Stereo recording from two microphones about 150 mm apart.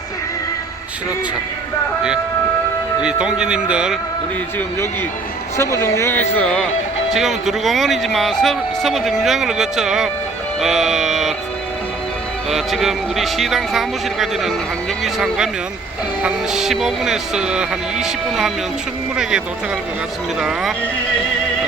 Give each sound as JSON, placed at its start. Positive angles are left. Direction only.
{"t": 3.0, "sound": "speech", "side_deg": -5}
{"t": 5.5, "sound": "speech", "side_deg": 20}
{"t": 12.5, "sound": "speech", "side_deg": 0}
{"t": 20.4, "sound": "speech", "side_deg": -5}